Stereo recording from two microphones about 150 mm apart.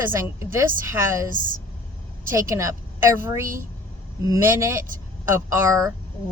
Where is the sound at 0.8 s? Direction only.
15° right (ahead or behind).